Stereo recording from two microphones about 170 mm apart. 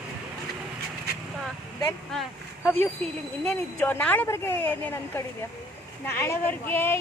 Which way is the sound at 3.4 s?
10° left (ahead or behind).